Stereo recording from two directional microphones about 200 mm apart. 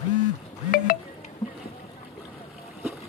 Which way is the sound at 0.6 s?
45° left (ahead or behind).